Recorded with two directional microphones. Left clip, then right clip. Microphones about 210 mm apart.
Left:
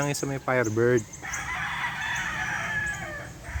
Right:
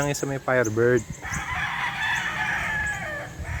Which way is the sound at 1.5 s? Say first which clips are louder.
Right 4 dB; 35° right (ahead or behind).